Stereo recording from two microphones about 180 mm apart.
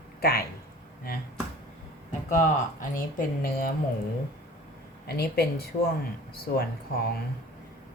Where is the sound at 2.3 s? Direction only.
50° left (ahead or behind).